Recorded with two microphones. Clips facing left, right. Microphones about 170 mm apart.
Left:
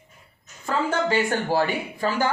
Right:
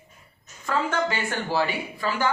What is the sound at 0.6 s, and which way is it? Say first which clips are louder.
Speech: left 1 dB; 35° left (ahead or behind).